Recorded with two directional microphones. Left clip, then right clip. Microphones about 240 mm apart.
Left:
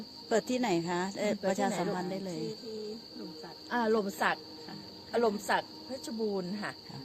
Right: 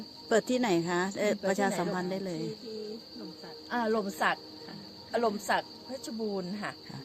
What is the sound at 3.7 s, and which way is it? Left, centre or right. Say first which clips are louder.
Speech: left 1 dB; centre.